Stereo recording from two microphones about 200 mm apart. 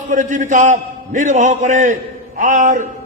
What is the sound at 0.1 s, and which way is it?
A man's voice, 40° right (ahead or behind).